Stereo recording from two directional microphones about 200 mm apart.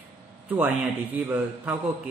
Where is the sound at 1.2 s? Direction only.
10° right (ahead or behind).